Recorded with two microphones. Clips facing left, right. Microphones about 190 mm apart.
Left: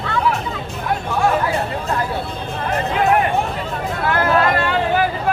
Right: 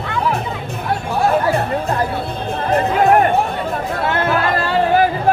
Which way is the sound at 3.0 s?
45° right (ahead or behind).